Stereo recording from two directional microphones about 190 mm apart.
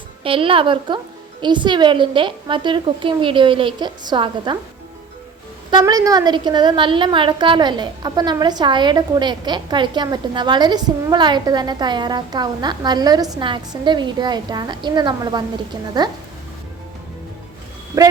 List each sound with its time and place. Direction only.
0.2 s a woman's voice: 30° right (ahead or behind)
5.7 s a woman's voice: 20° right (ahead or behind)
17.9 s a woman's voice: 20° right (ahead or behind)